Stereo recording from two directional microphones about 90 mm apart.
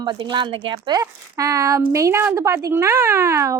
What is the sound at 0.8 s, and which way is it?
Speech, 40° right (ahead or behind).